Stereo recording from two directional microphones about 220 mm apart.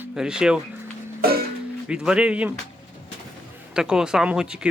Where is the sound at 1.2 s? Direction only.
45° right (ahead or behind).